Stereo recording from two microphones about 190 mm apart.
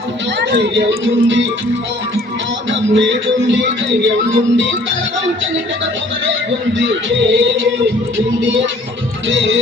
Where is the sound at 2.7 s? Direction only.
75° right (ahead or behind).